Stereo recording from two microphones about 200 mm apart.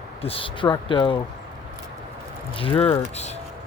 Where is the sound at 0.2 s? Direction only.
30° left (ahead or behind).